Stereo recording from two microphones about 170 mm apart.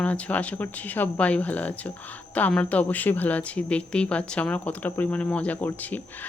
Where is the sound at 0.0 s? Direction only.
10° left (ahead or behind).